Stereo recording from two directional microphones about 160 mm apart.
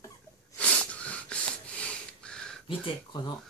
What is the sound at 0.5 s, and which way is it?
Wheeze, 10° left (ahead or behind).